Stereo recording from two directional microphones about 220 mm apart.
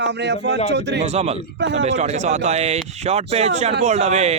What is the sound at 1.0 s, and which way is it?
Speech, 30° right (ahead or behind).